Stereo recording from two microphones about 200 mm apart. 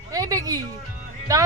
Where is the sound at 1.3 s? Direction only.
15° right (ahead or behind).